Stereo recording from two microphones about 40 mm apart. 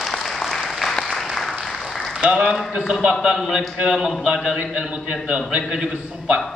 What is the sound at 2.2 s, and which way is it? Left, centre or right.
Speech, right.